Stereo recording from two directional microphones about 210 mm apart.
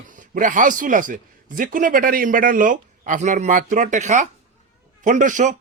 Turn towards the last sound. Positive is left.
turn(degrees=-35)  # may be behind; listen again after turning